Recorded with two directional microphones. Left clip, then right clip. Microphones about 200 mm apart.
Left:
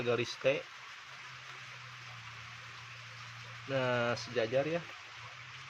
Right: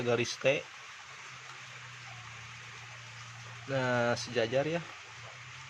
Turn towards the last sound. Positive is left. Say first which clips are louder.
# right 2 dB
turn(degrees=-5)  # may be behind; listen again after turning